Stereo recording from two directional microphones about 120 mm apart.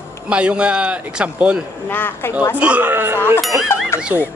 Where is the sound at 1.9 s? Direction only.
15° left (ahead or behind).